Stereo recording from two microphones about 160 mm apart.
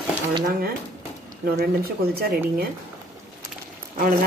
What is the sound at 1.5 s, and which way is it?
A woman's voice, 75° right (ahead or behind).